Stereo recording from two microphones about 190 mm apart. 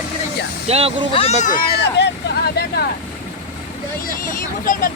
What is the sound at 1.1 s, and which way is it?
Speech, 30° left (ahead or behind).